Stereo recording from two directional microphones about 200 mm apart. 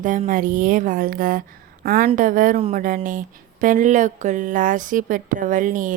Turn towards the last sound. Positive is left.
turn(degrees=-40)  # may be behind; listen again after turning